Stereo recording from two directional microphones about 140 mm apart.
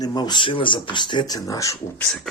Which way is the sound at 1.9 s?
5° left (ahead or behind).